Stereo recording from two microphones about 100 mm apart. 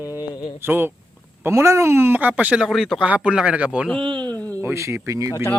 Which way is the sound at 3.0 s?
10° right (ahead or behind).